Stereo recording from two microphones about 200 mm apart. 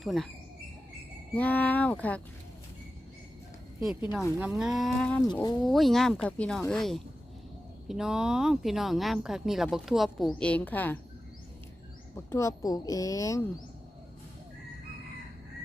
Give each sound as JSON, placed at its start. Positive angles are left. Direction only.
{"t": 0.0, "sound": "speech", "side_deg": 0}
{"t": 1.4, "sound": "a woman's voice", "side_deg": 10}
{"t": 4.4, "sound": "speech", "side_deg": -5}
{"t": 5.3, "sound": "speech", "side_deg": 20}
{"t": 5.6, "sound": "speech", "side_deg": 0}
{"t": 12.1, "sound": "a woman's voice", "side_deg": 15}